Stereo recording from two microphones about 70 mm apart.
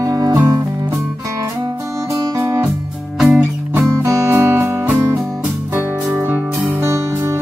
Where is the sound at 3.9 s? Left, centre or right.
Right.